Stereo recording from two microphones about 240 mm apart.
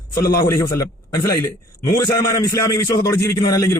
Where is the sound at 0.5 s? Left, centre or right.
Centre.